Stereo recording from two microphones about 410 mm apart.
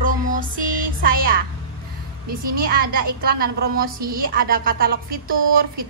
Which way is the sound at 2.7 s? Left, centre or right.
Right.